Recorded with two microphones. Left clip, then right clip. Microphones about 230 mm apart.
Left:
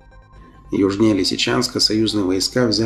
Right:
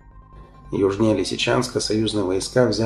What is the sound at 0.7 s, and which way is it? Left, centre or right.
Speech, left.